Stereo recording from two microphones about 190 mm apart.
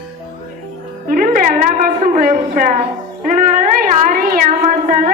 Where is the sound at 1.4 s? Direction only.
45° right (ahead or behind).